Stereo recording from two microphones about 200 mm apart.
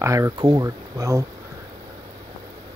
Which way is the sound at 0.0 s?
15° right (ahead or behind).